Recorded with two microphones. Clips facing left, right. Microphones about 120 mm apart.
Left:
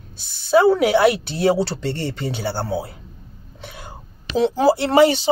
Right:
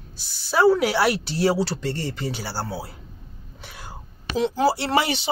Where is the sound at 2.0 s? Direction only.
60° left (ahead or behind).